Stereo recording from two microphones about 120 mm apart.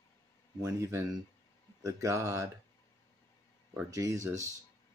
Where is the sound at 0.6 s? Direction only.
25° right (ahead or behind).